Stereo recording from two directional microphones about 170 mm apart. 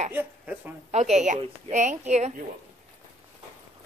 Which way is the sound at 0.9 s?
40° right (ahead or behind).